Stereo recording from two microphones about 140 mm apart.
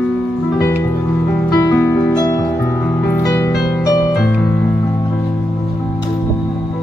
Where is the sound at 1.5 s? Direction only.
25° left (ahead or behind).